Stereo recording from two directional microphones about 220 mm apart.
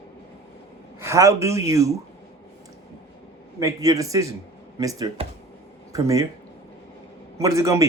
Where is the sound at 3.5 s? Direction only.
15° right (ahead or behind).